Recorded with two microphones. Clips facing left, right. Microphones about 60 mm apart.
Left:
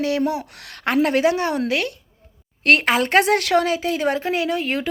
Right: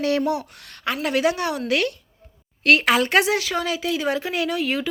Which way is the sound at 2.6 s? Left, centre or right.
Left.